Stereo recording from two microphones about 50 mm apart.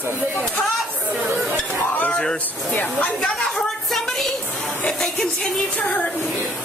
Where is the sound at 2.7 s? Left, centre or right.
Left.